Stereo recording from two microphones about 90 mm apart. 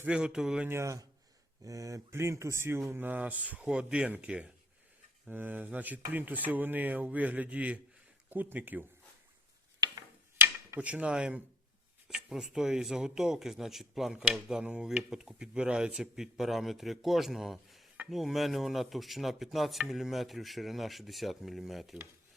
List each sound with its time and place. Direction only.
0.0 s speech: 10° right (ahead or behind)
0.7 s speech: 35° right (ahead or behind); by 4.5 s 10° right (ahead or behind)
5.3 s speech: 20° right (ahead or behind)
10.8 s speech: 15° right (ahead or behind)